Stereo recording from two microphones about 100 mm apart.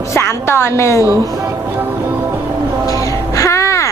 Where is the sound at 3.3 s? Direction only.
30° left (ahead or behind).